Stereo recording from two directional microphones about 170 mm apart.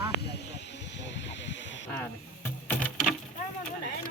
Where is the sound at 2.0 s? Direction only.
10° left (ahead or behind).